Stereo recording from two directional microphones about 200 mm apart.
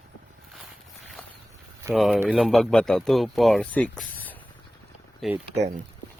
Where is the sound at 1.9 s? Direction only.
Centre (ahead or behind).